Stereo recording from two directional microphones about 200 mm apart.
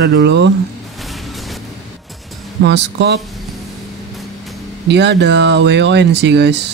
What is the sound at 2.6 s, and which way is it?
Speech, 60° right (ahead or behind).